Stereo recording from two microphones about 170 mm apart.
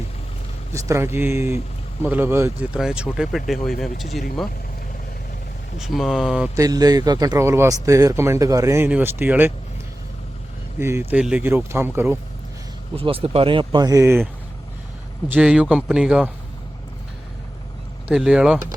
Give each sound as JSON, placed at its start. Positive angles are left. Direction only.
{"t": 0.7, "sound": "speech", "side_deg": -15}
{"t": 5.8, "sound": "speech", "side_deg": 0}
{"t": 6.6, "sound": "speech", "side_deg": -20}
{"t": 10.8, "sound": "speech", "side_deg": -15}
{"t": 13.0, "sound": "speech", "side_deg": -35}
{"t": 15.3, "sound": "speech", "side_deg": -5}
{"t": 18.1, "sound": "speech", "side_deg": -5}